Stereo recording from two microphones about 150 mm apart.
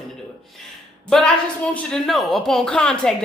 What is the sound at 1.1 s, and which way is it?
A woman's voice, 5° left (ahead or behind).